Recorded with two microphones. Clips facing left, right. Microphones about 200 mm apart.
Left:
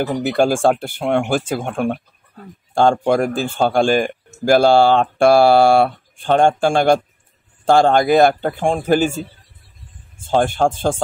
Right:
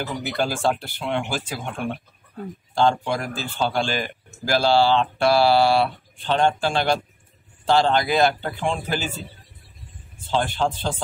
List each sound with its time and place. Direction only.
0.0 s a man's voice: 55° left (ahead or behind)
10.2 s a man's voice: 50° left (ahead or behind)